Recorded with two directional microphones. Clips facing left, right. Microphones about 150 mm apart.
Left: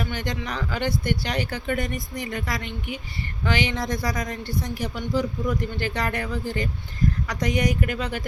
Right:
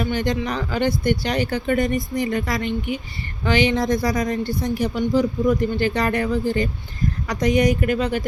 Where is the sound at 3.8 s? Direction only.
35° right (ahead or behind).